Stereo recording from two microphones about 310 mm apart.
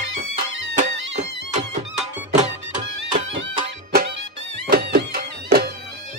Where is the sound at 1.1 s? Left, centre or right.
Right.